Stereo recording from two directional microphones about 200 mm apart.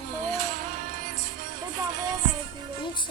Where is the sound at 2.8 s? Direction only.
25° left (ahead or behind).